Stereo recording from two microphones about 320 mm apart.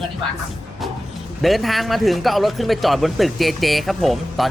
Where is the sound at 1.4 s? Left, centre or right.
Centre.